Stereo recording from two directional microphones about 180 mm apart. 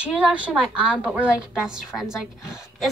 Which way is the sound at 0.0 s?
5° right (ahead or behind).